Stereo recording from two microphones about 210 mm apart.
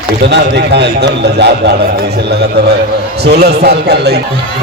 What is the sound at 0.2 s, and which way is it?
A man's voice, 55° right (ahead or behind).